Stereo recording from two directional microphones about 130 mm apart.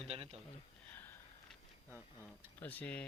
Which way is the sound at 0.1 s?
50° right (ahead or behind).